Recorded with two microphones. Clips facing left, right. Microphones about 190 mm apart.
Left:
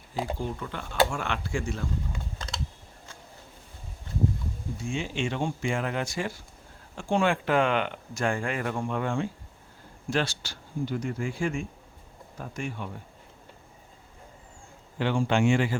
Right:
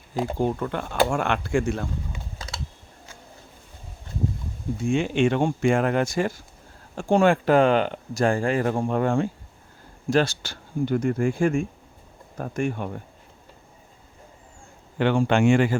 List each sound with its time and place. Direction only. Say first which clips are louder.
0.3 s speech: right 9 dB; 50° right (ahead or behind)
4.9 s speech: right 10 dB; 60° right (ahead or behind); by 10.3 s 40° right (ahead or behind)
10.4 s speech: right 6 dB; 55° right (ahead or behind)
14.9 s speech: right 5 dB; 60° right (ahead or behind)